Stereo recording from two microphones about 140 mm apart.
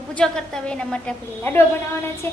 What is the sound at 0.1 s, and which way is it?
A woman's voice, 5° left (ahead or behind).